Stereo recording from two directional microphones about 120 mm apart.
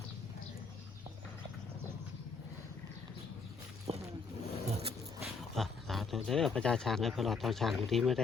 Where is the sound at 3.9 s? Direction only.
60° right (ahead or behind).